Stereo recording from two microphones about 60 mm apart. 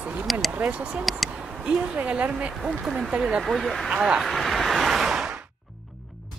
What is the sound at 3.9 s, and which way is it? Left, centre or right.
Speech, centre.